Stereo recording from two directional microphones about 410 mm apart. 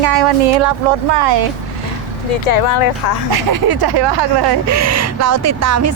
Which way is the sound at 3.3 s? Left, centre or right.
Right.